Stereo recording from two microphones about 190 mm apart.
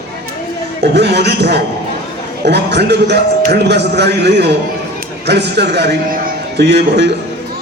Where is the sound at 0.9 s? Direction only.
60° right (ahead or behind).